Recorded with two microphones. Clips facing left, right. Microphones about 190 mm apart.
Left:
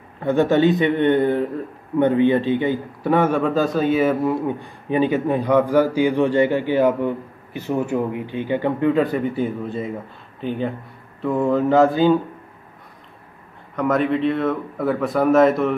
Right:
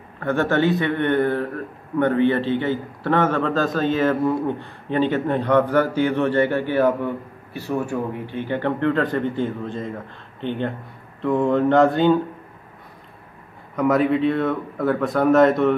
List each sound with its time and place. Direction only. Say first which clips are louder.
0.2 s a man's voice: left 3 dB; 15° left (ahead or behind)
13.7 s speech: right 1 dB; 5° right (ahead or behind)